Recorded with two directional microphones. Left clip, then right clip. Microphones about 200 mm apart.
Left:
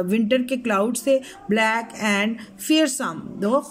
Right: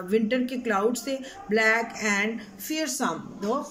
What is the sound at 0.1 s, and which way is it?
Speech, 45° left (ahead or behind).